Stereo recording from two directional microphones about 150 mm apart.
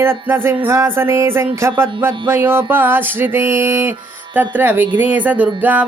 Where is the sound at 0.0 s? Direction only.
15° right (ahead or behind).